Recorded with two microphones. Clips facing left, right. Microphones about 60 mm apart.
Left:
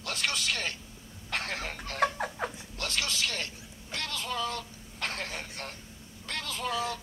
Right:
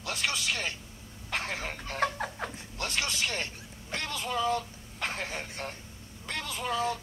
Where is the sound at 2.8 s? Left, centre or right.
Right.